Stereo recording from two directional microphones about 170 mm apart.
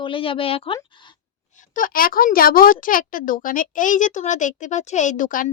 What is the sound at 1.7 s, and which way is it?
Speech, 55° left (ahead or behind).